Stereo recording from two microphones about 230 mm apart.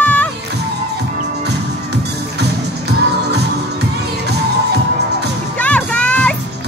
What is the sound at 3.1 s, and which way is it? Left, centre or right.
Music, right.